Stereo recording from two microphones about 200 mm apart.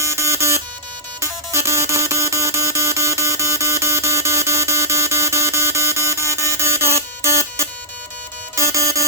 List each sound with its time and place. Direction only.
0.0 s buzzer: 15° right (ahead or behind)
1.2 s music: 15° right (ahead or behind)